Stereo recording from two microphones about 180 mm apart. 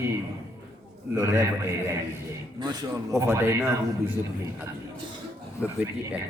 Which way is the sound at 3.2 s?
15° right (ahead or behind).